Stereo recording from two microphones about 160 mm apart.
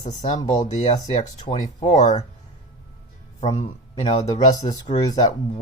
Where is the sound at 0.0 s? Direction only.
45° left (ahead or behind).